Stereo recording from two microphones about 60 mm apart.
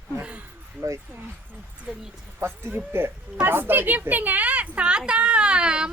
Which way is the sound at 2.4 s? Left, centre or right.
Right.